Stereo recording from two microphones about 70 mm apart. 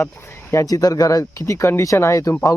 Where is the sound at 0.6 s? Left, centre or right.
Left.